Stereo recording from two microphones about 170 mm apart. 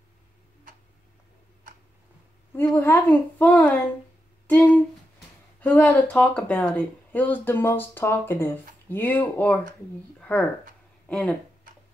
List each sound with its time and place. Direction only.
2.5 s speech: 15° left (ahead or behind)